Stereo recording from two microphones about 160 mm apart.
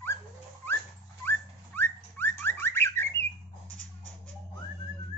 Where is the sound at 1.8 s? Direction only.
15° left (ahead or behind).